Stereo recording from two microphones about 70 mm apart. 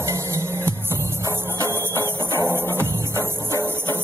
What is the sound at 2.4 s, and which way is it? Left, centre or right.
Music, right.